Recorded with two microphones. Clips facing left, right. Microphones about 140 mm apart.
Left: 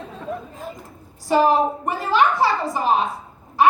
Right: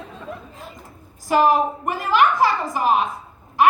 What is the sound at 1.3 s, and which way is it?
A woman's voice, 35° left (ahead or behind).